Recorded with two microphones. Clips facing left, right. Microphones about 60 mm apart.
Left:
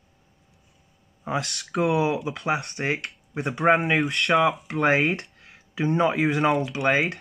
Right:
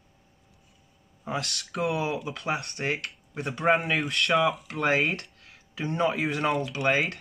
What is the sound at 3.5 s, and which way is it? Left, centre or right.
Speech, centre.